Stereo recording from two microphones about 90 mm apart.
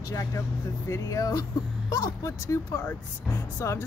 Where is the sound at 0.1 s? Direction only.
40° left (ahead or behind).